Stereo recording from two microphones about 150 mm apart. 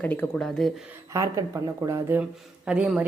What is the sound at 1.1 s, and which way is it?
Speech, 20° right (ahead or behind).